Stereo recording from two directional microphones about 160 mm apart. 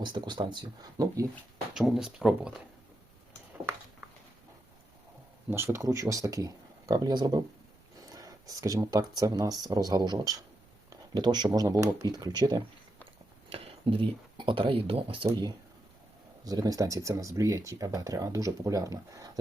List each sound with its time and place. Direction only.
0.0 s speech: 30° right (ahead or behind)
1.7 s speech: centre (ahead or behind)
5.5 s speech: 15° right (ahead or behind); by 15.3 s 35° right (ahead or behind)
16.4 s speech: 25° right (ahead or behind)